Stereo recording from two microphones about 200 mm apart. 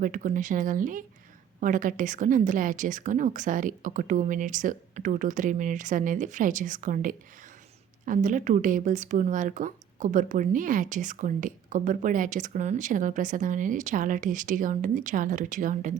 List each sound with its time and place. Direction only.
0.0 s speech: 40° right (ahead or behind)